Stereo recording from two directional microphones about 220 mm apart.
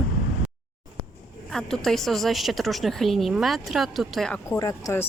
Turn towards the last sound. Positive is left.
turn(degrees=15)  # may be behind; listen again after turning